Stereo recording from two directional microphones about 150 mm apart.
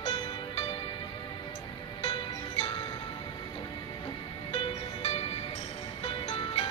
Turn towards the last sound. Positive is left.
turn(degrees=40)  # may be behind; listen again after turning